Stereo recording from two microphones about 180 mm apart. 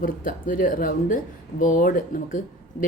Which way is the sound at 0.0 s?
50° left (ahead or behind).